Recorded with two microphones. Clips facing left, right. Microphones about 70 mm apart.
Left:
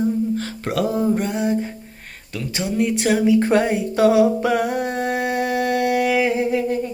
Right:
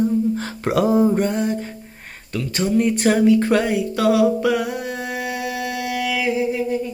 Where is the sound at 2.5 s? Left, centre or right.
Centre.